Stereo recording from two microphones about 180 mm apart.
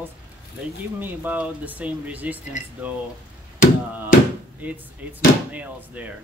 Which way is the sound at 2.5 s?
45° left (ahead or behind).